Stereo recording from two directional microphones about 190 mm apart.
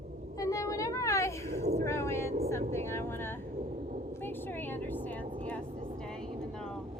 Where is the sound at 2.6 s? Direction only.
35° right (ahead or behind).